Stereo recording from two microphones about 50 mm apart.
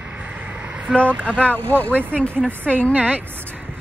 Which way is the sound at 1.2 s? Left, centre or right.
Left.